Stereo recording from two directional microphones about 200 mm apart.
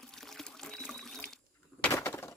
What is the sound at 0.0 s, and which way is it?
Pour, centre (ahead or behind).